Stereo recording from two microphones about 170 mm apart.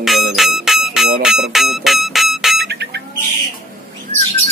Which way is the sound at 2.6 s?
75° right (ahead or behind).